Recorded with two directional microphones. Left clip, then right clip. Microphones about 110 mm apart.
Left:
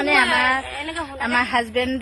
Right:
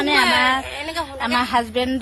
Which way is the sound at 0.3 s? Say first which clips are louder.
Right 1 dB; 20° left (ahead or behind).